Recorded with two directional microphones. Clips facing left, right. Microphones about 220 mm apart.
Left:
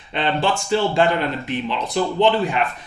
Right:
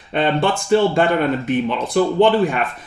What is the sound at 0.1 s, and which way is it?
Speech, 50° right (ahead or behind).